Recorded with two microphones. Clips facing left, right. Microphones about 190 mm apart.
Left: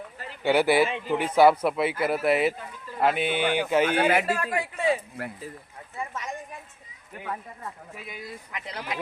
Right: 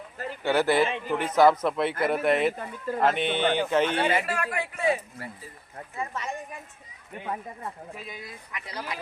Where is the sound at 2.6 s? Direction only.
50° right (ahead or behind).